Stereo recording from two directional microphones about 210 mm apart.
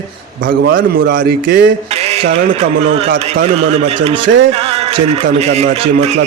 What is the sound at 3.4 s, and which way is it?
A man's voice, 30° right (ahead or behind).